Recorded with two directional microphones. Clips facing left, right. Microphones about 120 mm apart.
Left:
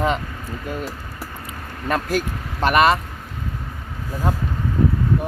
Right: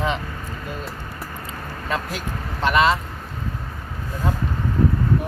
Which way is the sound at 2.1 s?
50° left (ahead or behind).